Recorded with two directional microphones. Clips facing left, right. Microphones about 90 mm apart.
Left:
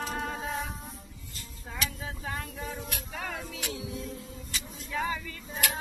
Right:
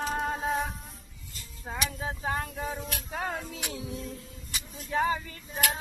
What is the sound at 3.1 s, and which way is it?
Music, 35° right (ahead or behind).